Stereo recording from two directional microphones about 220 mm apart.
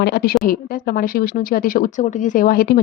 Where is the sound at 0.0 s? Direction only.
45° left (ahead or behind).